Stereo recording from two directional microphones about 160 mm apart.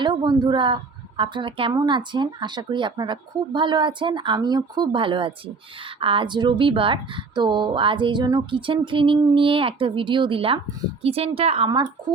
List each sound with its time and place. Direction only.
0.0 s speech: 30° right (ahead or behind)